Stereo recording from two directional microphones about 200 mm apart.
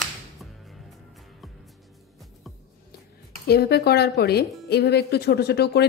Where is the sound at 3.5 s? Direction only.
55° left (ahead or behind).